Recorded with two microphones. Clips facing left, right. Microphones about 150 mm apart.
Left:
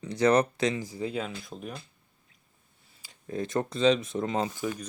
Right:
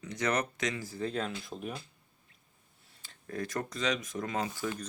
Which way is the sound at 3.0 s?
15° left (ahead or behind).